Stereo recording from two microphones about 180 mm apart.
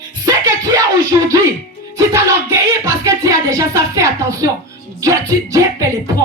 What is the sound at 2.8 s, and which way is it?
A woman's voice, 15° right (ahead or behind).